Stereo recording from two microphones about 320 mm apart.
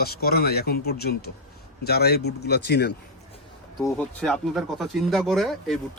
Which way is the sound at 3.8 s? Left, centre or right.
Centre.